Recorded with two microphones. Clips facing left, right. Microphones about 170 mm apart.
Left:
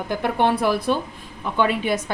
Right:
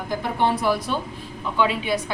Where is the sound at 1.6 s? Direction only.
50° left (ahead or behind).